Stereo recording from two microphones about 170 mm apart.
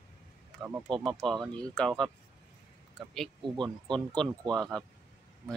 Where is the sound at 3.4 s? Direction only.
25° right (ahead or behind).